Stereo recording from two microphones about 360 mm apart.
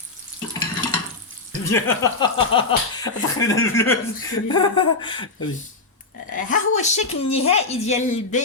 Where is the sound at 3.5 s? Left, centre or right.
Left.